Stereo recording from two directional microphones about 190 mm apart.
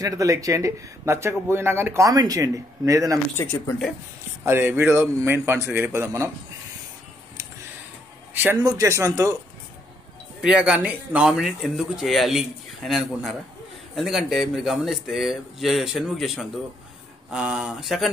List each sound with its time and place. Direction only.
0.0 s speech: 15° right (ahead or behind)
3.3 s speech: 10° left (ahead or behind)
4.5 s speech: 10° right (ahead or behind)
8.3 s speech: 10° right (ahead or behind)
10.4 s speech: 5° right (ahead or behind)